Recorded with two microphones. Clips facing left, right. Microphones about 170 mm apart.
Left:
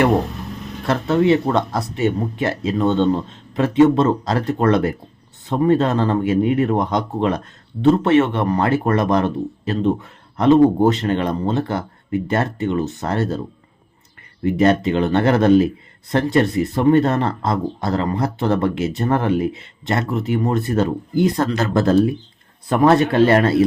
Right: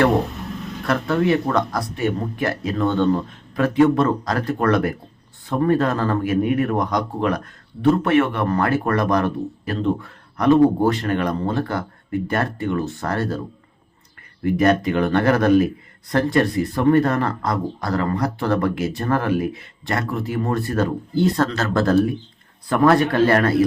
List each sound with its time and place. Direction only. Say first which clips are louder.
0.9 s speech: left 3 dB; 25° left (ahead or behind)
14.4 s speech: left 2 dB; 25° left (ahead or behind)